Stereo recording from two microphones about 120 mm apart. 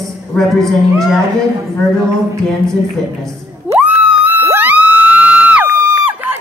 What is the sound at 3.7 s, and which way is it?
Crowd, 10° right (ahead or behind).